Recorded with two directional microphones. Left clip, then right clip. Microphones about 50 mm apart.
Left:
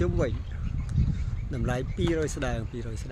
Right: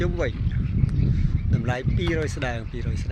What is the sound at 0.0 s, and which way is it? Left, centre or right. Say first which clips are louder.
Speech: right 2 dB; left.